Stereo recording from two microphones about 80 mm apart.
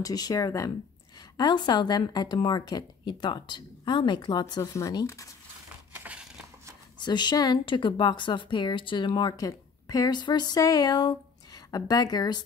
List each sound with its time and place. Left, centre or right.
0.0 s speech: left
1.3 s a woman's voice: left
4.6 s speech: left
7.0 s speech: left
9.8 s speech: left